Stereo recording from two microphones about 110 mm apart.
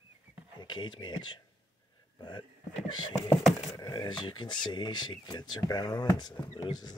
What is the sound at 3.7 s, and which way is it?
Speech, 45° left (ahead or behind).